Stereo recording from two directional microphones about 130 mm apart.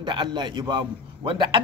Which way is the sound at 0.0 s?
35° right (ahead or behind).